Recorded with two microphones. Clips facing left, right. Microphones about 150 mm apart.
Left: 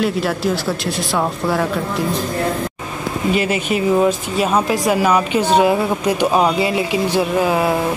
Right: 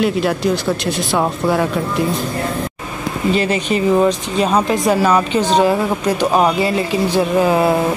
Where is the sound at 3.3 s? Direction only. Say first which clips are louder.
Right 2 dB; 10° left (ahead or behind).